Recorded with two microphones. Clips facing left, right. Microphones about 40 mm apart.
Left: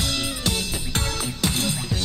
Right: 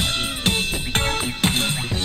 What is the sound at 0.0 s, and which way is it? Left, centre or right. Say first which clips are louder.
Music: right 3 dB; right.